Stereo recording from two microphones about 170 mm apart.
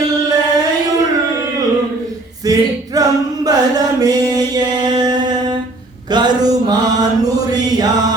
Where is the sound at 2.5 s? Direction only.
20° right (ahead or behind).